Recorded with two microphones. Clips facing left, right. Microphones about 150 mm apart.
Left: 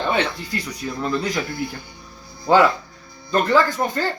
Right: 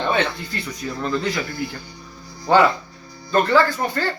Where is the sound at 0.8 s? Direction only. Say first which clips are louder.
Even; 15° left (ahead or behind).